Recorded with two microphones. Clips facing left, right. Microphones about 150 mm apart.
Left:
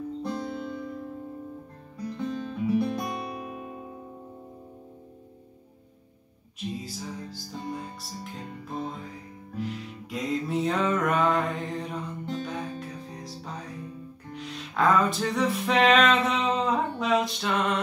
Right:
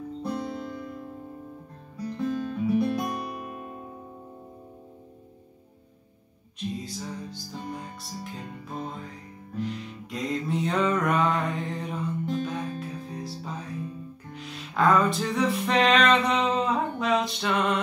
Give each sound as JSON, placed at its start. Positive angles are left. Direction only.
{"t": 0.2, "sound": "music", "side_deg": 0}
{"t": 2.1, "sound": "music", "side_deg": 0}
{"t": 6.8, "sound": "music", "side_deg": 0}